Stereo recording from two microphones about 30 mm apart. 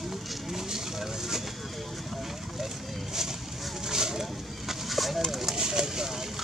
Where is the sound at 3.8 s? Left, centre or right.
Centre.